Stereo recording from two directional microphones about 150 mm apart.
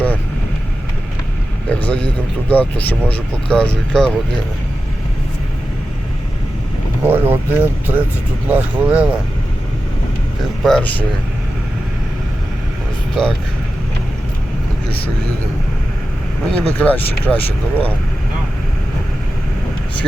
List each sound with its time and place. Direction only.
1.7 s a sound: 10° left (ahead or behind)
2.5 s speech: 10° left (ahead or behind)
7.0 s speech: 15° right (ahead or behind)
10.6 s speech: 5° left (ahead or behind)
13.2 s speech: 5° left (ahead or behind)
16.6 s speech: 10° left (ahead or behind)